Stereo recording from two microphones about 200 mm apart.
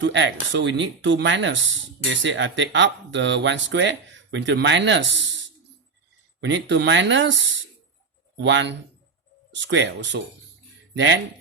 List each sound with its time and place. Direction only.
0.0 s speech: 65° right (ahead or behind)
6.4 s speech: 65° right (ahead or behind)